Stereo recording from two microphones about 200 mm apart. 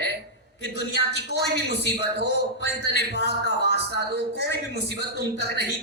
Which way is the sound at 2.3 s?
60° left (ahead or behind).